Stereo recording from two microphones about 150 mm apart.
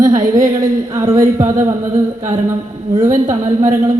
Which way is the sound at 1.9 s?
55° right (ahead or behind).